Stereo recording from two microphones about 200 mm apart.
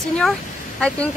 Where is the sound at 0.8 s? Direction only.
5° left (ahead or behind).